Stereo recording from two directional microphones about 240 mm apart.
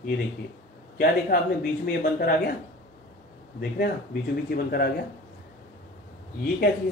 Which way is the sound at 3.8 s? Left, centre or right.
Left.